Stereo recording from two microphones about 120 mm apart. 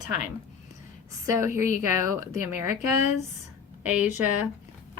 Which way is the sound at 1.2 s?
25° right (ahead or behind).